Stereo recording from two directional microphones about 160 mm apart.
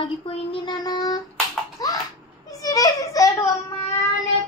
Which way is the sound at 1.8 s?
25° left (ahead or behind).